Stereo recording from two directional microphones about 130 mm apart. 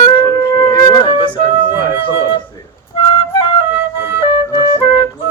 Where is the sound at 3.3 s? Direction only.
40° left (ahead or behind).